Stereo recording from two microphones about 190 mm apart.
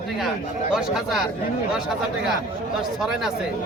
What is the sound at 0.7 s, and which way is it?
Speech, centre (ahead or behind).